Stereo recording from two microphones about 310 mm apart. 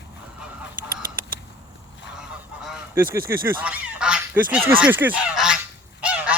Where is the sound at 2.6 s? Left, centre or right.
Centre.